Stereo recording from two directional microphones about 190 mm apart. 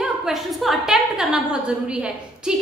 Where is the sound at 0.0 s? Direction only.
Centre (ahead or behind).